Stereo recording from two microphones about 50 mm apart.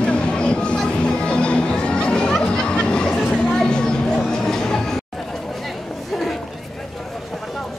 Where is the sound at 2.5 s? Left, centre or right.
Centre.